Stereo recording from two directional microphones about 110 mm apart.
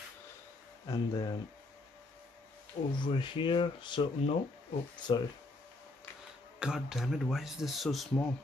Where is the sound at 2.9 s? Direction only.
45° left (ahead or behind).